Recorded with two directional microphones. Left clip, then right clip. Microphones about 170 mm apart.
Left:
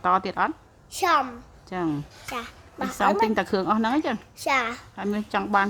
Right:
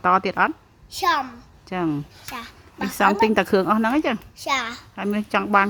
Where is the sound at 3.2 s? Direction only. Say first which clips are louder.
Right 5 dB; 20° right (ahead or behind).